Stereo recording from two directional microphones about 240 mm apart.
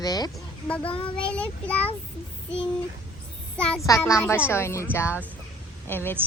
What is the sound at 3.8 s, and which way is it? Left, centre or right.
Speech, centre.